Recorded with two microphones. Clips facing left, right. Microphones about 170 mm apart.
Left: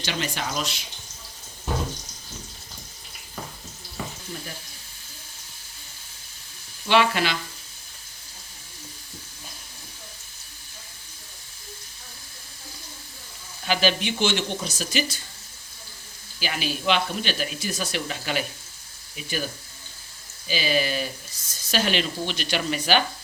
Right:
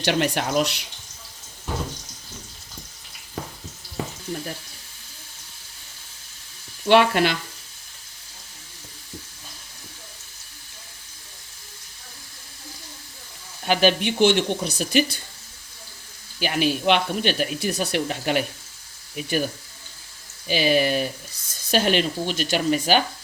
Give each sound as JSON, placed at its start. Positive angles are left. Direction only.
{"t": 0.0, "sound": "speech", "side_deg": -65}
{"t": 6.8, "sound": "speech", "side_deg": -55}
{"t": 13.7, "sound": "speech", "side_deg": -55}
{"t": 16.4, "sound": "speech", "side_deg": -60}
{"t": 20.5, "sound": "speech", "side_deg": -60}